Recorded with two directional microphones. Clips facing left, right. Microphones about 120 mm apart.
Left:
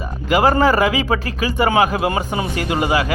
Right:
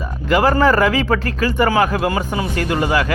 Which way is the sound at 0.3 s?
15° left (ahead or behind).